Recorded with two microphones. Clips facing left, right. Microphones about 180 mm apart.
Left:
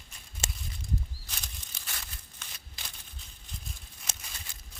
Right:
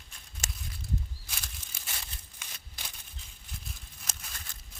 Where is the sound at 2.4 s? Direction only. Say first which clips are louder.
Even; 10° right (ahead or behind).